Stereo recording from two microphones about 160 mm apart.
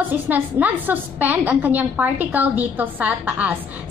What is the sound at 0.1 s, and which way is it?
A woman's voice, 10° right (ahead or behind).